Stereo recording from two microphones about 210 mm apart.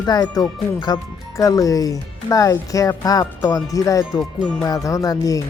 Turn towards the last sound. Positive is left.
turn(degrees=15)  # may be behind; listen again after turning